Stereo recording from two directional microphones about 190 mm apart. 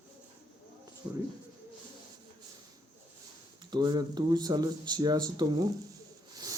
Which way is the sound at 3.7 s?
20° right (ahead or behind).